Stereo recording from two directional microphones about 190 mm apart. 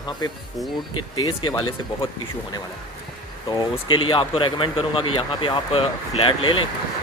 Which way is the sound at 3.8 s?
25° left (ahead or behind).